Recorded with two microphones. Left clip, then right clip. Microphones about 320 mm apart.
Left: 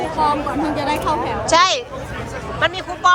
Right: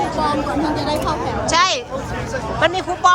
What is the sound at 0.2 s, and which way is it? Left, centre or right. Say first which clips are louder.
Speech: left 5 dB; centre.